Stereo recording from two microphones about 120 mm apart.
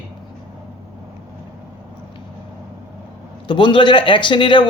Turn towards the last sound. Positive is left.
turn(degrees=40)  # may be behind; listen again after turning